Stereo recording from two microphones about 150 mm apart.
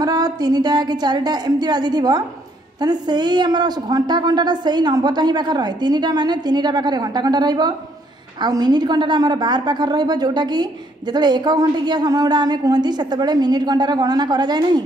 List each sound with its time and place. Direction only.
0.0 s a woman's voice: 25° right (ahead or behind)